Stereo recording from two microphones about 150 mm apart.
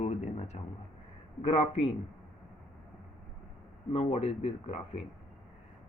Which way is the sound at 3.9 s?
45° left (ahead or behind).